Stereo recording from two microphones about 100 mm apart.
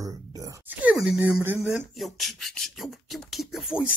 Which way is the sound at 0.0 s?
35° right (ahead or behind).